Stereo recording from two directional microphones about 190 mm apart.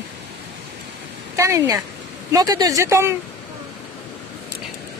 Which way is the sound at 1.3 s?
15° right (ahead or behind).